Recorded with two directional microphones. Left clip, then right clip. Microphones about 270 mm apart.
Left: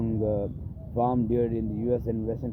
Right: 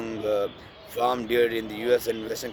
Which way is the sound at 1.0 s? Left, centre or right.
Centre.